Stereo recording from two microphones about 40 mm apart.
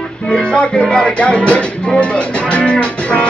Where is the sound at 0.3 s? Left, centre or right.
Left.